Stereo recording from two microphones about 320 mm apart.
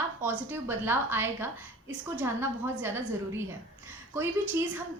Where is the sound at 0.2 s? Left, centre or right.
Centre.